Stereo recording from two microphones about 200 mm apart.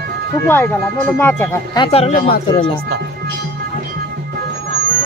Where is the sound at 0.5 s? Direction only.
10° left (ahead or behind).